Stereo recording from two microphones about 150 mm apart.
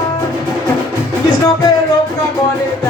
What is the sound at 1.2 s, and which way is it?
Music, 25° left (ahead or behind).